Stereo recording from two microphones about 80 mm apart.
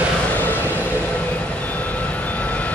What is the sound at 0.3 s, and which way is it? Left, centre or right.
Vehicle, left.